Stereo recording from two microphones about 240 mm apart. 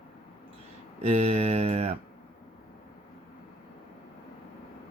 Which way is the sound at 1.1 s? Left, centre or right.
Right.